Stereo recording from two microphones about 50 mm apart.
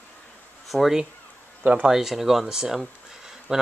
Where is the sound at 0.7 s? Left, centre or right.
Centre.